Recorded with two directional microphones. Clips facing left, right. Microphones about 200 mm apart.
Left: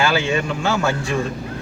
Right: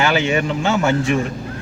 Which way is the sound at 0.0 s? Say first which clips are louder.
Right 2 dB; 20° right (ahead or behind).